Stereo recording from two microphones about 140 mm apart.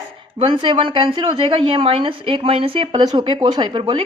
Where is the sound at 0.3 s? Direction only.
35° right (ahead or behind).